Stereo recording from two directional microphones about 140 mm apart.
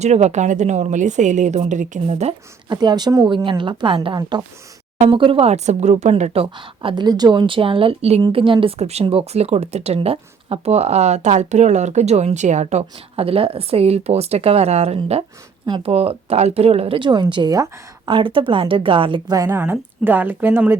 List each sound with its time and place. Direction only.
0.0 s a woman's voice: 50° right (ahead or behind)
2.6 s speech: 30° right (ahead or behind)
4.2 s speech: 25° right (ahead or behind)
4.9 s speech: 40° right (ahead or behind)
8.6 s speech: 50° right (ahead or behind)
19.4 s speech: 15° right (ahead or behind)